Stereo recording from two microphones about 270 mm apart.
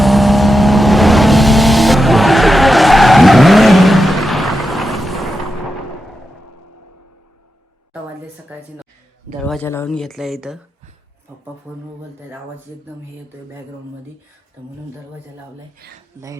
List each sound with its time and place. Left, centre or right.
0.0 s vehicle: centre
9.4 s speech: centre
15.8 s speech: right